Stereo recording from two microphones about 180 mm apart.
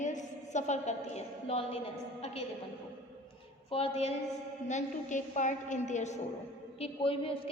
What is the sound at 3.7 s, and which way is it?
A woman's voice, 35° left (ahead or behind).